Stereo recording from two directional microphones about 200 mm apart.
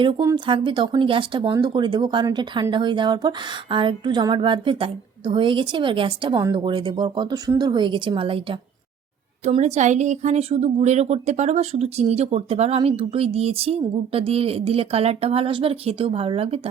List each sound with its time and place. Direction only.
0.0 s speech: 20° right (ahead or behind)